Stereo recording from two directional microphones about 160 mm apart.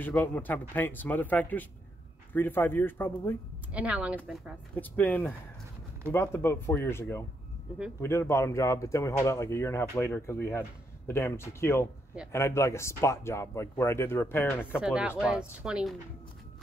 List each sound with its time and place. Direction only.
0.0 s speech: 10° left (ahead or behind)
3.7 s speech: 10° right (ahead or behind)
4.7 s speech: 10° left (ahead or behind)
14.8 s speech: 5° right (ahead or behind)